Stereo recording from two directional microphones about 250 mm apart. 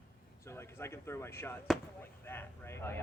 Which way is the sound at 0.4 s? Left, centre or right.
Centre.